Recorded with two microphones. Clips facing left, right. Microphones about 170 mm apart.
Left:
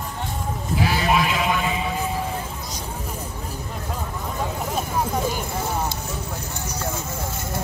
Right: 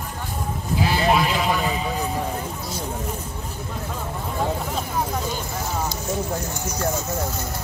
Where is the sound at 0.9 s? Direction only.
30° right (ahead or behind).